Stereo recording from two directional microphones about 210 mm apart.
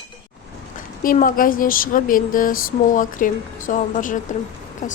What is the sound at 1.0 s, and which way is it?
Speech, 40° left (ahead or behind).